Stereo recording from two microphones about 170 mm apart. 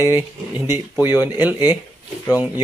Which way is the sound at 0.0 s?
15° right (ahead or behind).